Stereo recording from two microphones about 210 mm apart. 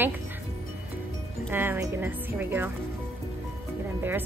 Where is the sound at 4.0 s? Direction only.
10° right (ahead or behind).